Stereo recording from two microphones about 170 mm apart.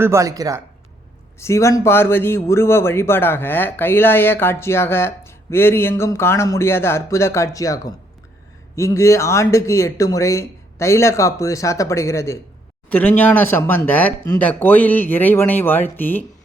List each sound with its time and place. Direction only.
0.0 s speech: 20° right (ahead or behind)
1.4 s speech: 15° left (ahead or behind)